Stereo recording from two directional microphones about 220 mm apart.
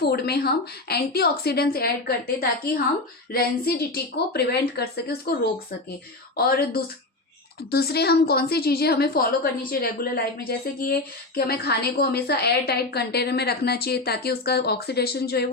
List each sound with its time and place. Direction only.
0.0 s a woman's voice: 45° left (ahead or behind)
6.3 s a woman's voice: 45° left (ahead or behind)